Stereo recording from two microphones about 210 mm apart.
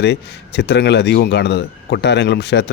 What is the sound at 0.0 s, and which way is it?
Speech, 55° left (ahead or behind).